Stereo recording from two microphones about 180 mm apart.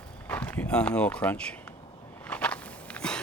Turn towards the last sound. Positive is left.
turn(degrees=5)  # may be behind; listen again after turning